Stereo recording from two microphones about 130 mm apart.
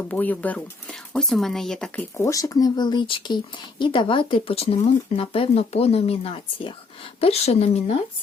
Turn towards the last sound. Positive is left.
turn(degrees=50)  # may be behind; listen again after turning